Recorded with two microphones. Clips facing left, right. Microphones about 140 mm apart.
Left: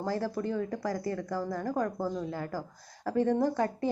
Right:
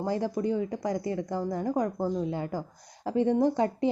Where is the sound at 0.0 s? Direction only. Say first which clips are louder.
Right 3 dB; 20° right (ahead or behind).